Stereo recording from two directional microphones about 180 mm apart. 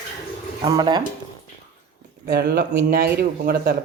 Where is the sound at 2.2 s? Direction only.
60° right (ahead or behind).